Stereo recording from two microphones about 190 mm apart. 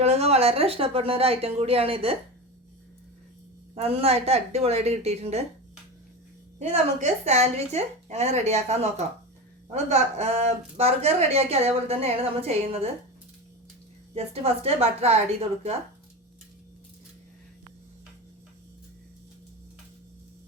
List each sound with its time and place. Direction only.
0.0 s a woman's voice: 35° right (ahead or behind)
3.8 s a woman's voice: 30° right (ahead or behind)
6.6 s a woman's voice: 35° right (ahead or behind)
14.1 s a woman's voice: 30° right (ahead or behind)